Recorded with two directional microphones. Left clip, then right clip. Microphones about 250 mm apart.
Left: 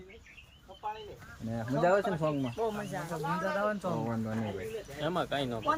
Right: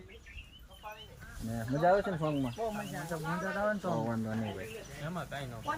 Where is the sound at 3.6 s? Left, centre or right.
Centre.